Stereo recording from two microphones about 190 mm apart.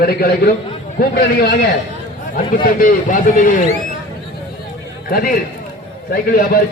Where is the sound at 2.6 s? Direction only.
45° left (ahead or behind).